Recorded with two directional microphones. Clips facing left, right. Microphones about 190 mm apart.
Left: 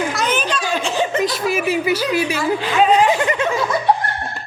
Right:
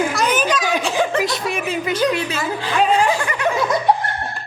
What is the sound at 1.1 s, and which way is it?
A woman's voice, centre (ahead or behind).